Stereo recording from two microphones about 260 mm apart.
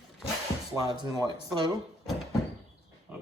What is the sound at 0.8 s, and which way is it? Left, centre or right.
Speech, centre.